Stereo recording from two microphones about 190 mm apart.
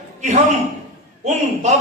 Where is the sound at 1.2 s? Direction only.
35° right (ahead or behind).